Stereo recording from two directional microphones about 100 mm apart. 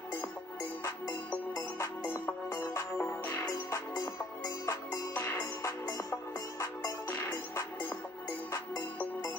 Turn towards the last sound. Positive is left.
turn(degrees=30)  # may be behind; listen again after turning